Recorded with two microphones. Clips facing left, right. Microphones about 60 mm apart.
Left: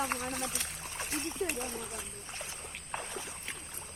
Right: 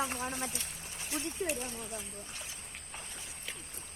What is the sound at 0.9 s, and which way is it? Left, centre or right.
Speech, left.